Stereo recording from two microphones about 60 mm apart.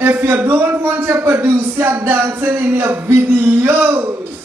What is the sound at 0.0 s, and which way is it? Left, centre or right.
A man's voice, right.